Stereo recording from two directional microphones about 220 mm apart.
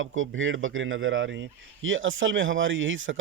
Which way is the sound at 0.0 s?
65° right (ahead or behind).